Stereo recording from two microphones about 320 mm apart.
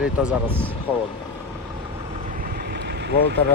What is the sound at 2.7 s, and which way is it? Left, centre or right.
Vehicle, right.